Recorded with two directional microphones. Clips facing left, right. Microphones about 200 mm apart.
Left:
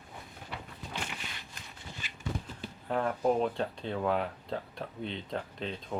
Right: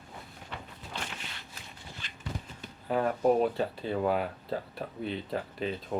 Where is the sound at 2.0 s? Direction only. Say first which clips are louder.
Even; 5° left (ahead or behind).